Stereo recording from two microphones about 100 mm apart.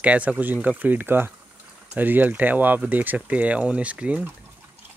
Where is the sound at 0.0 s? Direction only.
15° right (ahead or behind).